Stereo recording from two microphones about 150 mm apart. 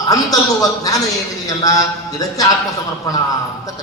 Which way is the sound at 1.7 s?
25° left (ahead or behind).